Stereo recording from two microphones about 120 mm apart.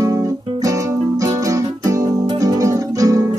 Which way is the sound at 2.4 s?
30° right (ahead or behind).